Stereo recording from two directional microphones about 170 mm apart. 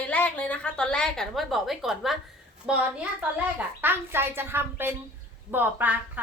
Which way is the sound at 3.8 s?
15° right (ahead or behind).